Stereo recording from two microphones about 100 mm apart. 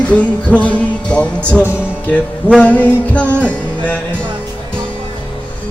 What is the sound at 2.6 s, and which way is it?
Music, 15° left (ahead or behind).